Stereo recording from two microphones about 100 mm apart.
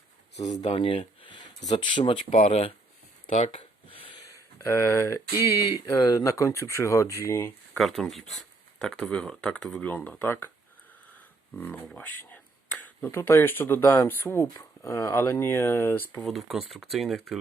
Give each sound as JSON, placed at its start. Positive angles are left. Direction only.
{"t": 0.6, "sound": "speech", "side_deg": 65}
{"t": 2.3, "sound": "speech", "side_deg": 90}
{"t": 3.8, "sound": "a sound", "side_deg": 60}
{"t": 4.2, "sound": "a sound", "side_deg": 35}
{"t": 5.5, "sound": "speech", "side_deg": 35}
{"t": 7.8, "sound": "speech", "side_deg": 0}
{"t": 9.8, "sound": "speech", "side_deg": 15}
{"t": 11.5, "sound": "a sound", "side_deg": 20}
{"t": 13.1, "sound": "speech", "side_deg": 25}
{"t": 16.2, "sound": "speech", "side_deg": 0}